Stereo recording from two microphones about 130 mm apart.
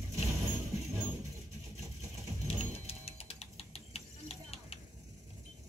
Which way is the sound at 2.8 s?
50° left (ahead or behind).